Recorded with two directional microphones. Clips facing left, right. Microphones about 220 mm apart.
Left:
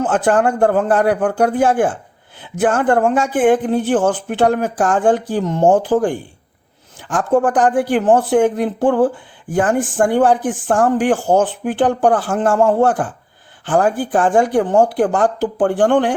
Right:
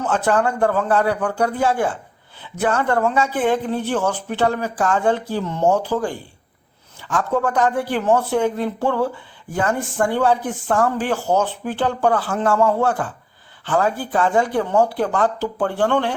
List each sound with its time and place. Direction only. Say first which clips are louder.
0.0 s speech: left 4 dB; 50° left (ahead or behind)
7.1 s speech: left 5 dB; 50° left (ahead or behind)